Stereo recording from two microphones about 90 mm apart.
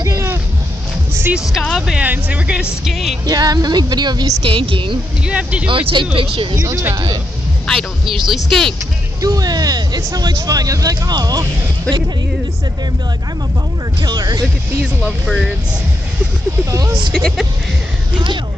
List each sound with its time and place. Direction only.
0.0 s a sound: 35° right (ahead or behind)
1.3 s music: 5° right (ahead or behind)
2.0 s speech: 15° right (ahead or behind)
2.8 s speech: centre (ahead or behind)
3.3 s speech: 45° right (ahead or behind)
4.4 s a woman's voice: 75° right (ahead or behind)
5.2 s speech: 15° right (ahead or behind)
5.7 s a woman's voice: 70° right (ahead or behind)
6.5 s speech: 35° right (ahead or behind)
7.6 s speech: centre (ahead or behind)
9.2 s speech: 45° right (ahead or behind)
14.0 s speech: 50° right (ahead or behind)
14.8 s speech: 5° right (ahead or behind)
17.1 s speech: 5° left (ahead or behind)